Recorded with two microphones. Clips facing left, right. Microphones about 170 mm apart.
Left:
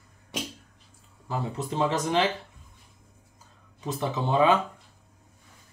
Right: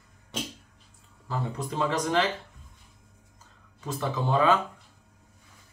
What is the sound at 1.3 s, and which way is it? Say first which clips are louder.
Speech: left 1 dB; 20° left (ahead or behind).